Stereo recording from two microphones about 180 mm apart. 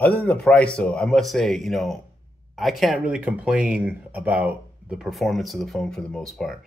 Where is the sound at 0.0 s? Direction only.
5° left (ahead or behind).